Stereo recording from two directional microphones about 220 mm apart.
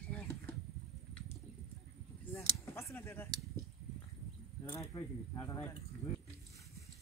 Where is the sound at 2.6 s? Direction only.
10° left (ahead or behind).